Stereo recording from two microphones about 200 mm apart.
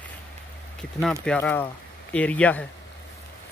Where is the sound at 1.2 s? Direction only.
5° left (ahead or behind).